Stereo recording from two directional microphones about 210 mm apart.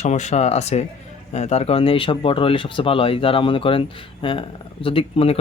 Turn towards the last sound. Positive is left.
turn(degrees=25)  # may be behind; listen again after turning